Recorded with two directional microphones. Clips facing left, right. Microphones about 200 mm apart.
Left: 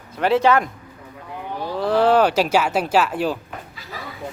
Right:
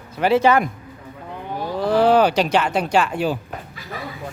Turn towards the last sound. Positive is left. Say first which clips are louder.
# even
turn(degrees=0)  # may be behind; listen again after turning